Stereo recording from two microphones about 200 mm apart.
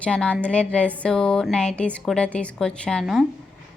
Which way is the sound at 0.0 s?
5° left (ahead or behind).